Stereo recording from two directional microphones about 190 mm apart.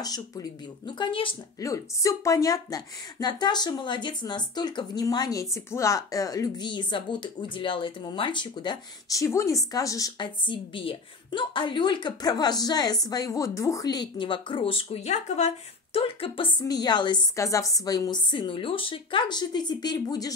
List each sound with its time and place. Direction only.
0.0 s a woman's voice: 20° left (ahead or behind)